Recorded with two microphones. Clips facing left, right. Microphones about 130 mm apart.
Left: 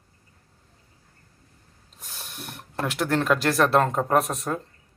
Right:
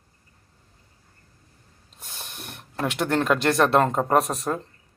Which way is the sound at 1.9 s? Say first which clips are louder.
Right 1 dB; centre (ahead or behind).